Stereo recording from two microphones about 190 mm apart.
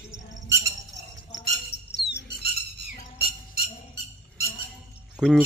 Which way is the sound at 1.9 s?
65° left (ahead or behind).